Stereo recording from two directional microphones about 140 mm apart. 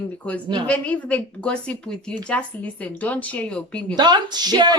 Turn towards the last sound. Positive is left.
turn(degrees=-30)  # may be behind; listen again after turning